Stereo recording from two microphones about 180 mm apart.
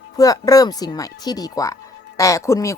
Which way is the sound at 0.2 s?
20° left (ahead or behind).